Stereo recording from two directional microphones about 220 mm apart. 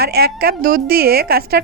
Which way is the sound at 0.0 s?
45° right (ahead or behind).